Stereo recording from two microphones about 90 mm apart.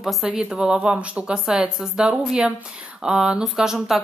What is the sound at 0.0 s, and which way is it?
A woman's voice, 5° right (ahead or behind).